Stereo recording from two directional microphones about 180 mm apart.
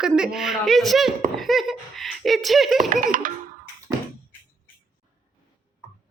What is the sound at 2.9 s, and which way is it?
Speech, 45° right (ahead or behind).